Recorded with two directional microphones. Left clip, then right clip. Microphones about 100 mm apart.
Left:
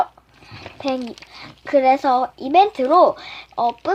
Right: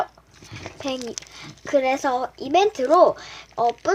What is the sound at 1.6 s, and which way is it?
A woman's voice, 30° left (ahead or behind).